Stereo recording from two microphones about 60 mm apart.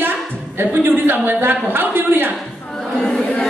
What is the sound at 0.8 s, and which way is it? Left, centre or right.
A man's voice, right.